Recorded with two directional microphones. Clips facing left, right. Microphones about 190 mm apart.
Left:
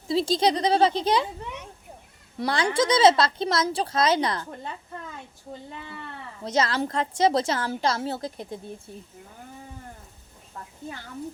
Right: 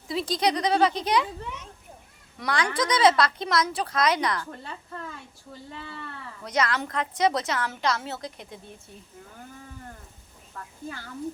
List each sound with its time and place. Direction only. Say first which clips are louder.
0.1 s speech: left 3 dB; 30° left (ahead or behind)
2.4 s speech: left 3 dB; 30° left (ahead or behind)
6.4 s a woman's voice: left 2 dB; 25° left (ahead or behind)